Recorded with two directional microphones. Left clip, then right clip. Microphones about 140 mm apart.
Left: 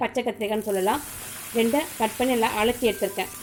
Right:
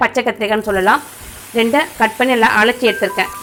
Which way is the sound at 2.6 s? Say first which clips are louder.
Right 10 dB; 45° right (ahead or behind).